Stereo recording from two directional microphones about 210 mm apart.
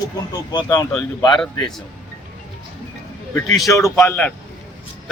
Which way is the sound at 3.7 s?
15° left (ahead or behind).